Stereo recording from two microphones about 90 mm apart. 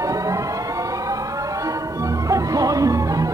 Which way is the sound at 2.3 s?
40° right (ahead or behind).